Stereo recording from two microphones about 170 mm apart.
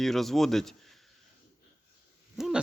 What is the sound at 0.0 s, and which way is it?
Speech, centre (ahead or behind).